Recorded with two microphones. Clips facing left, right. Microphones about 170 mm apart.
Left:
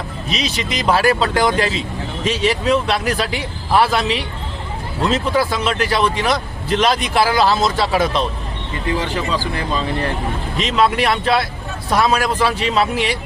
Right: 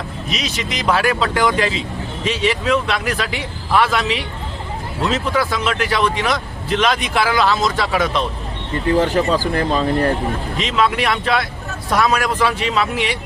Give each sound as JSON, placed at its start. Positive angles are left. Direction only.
{"t": 0.3, "sound": "speech", "side_deg": 30}
{"t": 9.0, "sound": "speech", "side_deg": -45}
{"t": 10.6, "sound": "speech", "side_deg": 35}